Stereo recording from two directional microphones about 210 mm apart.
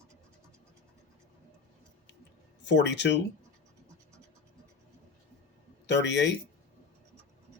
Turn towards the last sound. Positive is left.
turn(degrees=55)  # may be behind; listen again after turning